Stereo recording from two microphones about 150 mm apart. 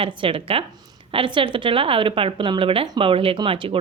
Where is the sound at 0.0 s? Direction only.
35° right (ahead or behind).